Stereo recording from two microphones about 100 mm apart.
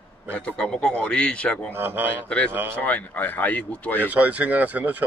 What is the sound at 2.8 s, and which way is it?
A man's voice, 15° left (ahead or behind).